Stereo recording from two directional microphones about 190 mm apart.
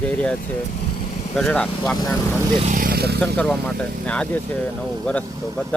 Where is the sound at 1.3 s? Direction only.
5° left (ahead or behind).